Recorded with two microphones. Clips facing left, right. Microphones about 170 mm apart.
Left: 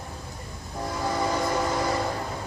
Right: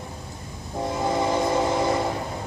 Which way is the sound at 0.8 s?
25° right (ahead or behind).